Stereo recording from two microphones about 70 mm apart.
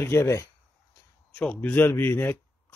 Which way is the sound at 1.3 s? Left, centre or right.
Centre.